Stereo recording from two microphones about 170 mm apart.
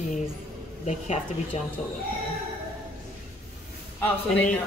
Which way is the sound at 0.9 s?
40° left (ahead or behind).